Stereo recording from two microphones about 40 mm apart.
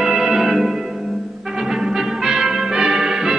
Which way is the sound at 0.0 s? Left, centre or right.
Centre.